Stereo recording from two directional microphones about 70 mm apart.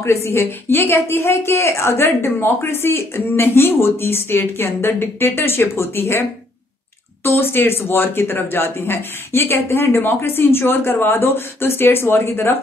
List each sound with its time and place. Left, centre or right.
0.0 s a woman's voice: left
7.2 s a woman's voice: left